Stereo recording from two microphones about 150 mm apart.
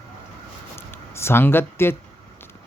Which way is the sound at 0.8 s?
15° left (ahead or behind).